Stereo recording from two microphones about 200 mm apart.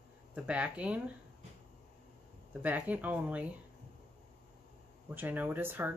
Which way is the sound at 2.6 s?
10° right (ahead or behind).